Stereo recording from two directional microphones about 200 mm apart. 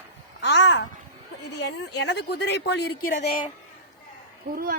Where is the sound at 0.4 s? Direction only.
60° left (ahead or behind).